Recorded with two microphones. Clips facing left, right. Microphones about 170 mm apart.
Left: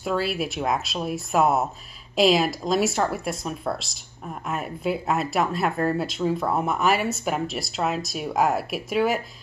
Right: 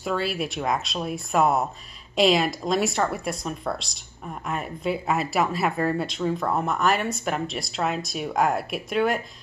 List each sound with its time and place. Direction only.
0.0 s speech: centre (ahead or behind)